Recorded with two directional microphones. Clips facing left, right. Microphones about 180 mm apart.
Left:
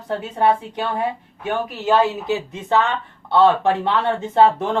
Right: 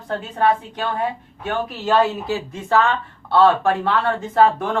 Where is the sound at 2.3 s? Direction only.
20° left (ahead or behind).